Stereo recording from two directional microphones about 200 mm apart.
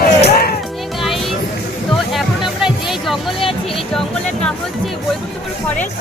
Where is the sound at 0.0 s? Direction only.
50° left (ahead or behind).